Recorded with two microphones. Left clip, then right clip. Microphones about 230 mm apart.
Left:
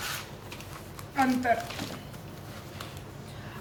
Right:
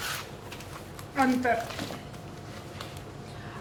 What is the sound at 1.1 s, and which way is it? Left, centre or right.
Speech, left.